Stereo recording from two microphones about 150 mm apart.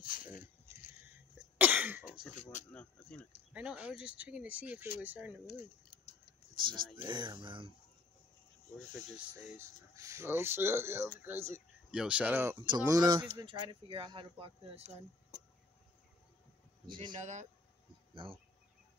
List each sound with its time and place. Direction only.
0.0 s a sound: 65° left (ahead or behind)
1.6 s cough: 10° right (ahead or behind)
2.7 s speech: 10° left (ahead or behind)
3.5 s speech: 10° right (ahead or behind)
6.5 s speech: 30° right (ahead or behind)
9.9 s speech: 20° right (ahead or behind)
11.9 s speech: 5° right (ahead or behind)
12.6 s speech: 25° right (ahead or behind)
16.9 s speech: 35° right (ahead or behind)
17.2 s speech: 50° right (ahead or behind)